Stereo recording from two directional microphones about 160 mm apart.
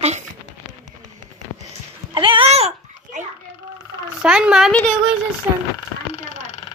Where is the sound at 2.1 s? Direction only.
35° right (ahead or behind).